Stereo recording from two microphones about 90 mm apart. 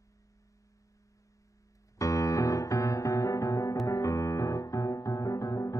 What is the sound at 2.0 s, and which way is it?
Piano, 40° left (ahead or behind).